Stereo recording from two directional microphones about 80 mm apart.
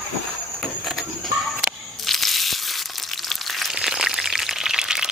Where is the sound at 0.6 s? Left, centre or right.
Centre.